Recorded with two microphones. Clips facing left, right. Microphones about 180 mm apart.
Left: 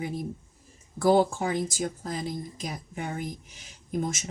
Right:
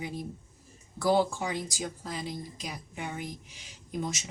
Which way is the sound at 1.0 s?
50° left (ahead or behind).